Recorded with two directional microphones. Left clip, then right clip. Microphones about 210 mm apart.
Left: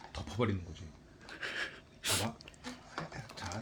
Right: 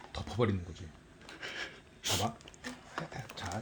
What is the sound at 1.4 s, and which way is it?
Gasp, centre (ahead or behind).